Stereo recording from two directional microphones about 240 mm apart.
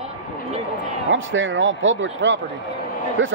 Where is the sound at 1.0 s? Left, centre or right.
Right.